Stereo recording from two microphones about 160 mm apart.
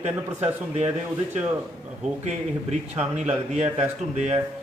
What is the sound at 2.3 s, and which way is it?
Speech, 45° right (ahead or behind).